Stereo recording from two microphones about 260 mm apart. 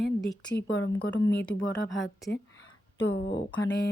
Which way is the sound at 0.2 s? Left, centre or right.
Centre.